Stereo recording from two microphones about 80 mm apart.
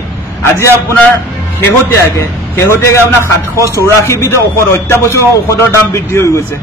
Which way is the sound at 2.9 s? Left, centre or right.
Left.